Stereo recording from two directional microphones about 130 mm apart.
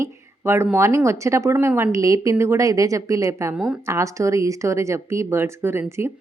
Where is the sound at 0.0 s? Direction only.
20° right (ahead or behind).